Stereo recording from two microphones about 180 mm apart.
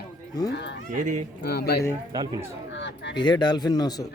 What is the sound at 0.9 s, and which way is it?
Speech, 45° right (ahead or behind).